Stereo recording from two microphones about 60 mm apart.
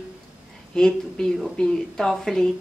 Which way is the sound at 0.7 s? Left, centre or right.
Centre.